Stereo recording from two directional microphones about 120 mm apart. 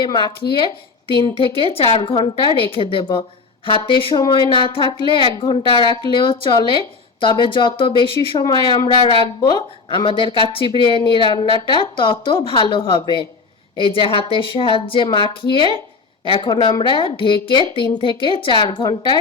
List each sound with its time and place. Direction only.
0.0 s a woman's voice: 40° left (ahead or behind)